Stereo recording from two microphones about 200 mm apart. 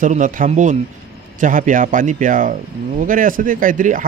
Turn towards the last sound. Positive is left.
turn(degrees=-40)  # may be behind; listen again after turning